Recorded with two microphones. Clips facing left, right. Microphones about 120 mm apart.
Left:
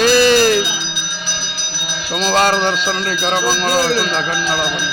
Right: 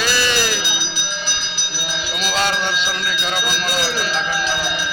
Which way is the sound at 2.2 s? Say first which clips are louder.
Left 7 dB; 45° left (ahead or behind).